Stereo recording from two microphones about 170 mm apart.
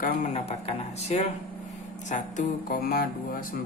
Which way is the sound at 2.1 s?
50° left (ahead or behind).